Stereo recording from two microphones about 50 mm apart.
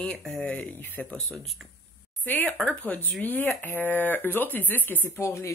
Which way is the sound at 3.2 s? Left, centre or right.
Left.